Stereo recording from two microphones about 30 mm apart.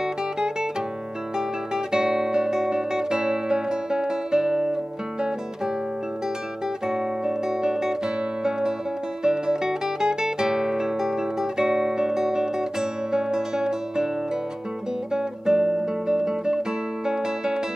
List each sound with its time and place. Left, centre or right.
0.0 s music: centre
1.9 s music: right
6.9 s music: right
15.1 s guitar: centre